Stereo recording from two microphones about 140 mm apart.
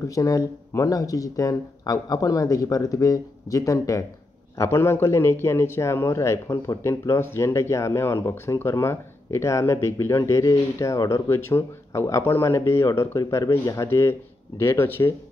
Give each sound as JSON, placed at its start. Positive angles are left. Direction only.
{"t": 0.1, "sound": "a man's voice", "side_deg": 25}